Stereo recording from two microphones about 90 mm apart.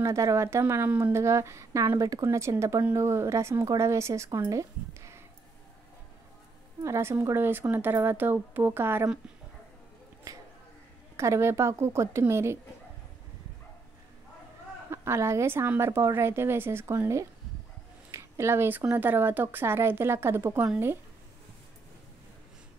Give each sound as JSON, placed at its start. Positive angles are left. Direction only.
{"t": 0.0, "sound": "a woman's voice", "side_deg": -35}
{"t": 2.2, "sound": "a woman's voice", "side_deg": -30}
{"t": 4.5, "sound": "a sound", "side_deg": -35}
{"t": 6.8, "sound": "speech", "side_deg": -30}
{"t": 10.3, "sound": "a woman's voice", "side_deg": -40}
{"t": 14.9, "sound": "a woman's voice", "side_deg": -30}